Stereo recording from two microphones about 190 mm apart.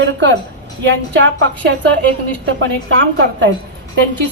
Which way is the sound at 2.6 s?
75° right (ahead or behind).